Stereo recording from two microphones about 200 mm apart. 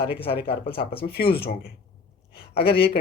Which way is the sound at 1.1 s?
50° left (ahead or behind).